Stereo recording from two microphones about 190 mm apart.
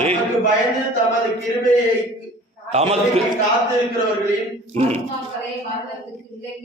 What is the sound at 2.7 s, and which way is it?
Speech, 35° right (ahead or behind).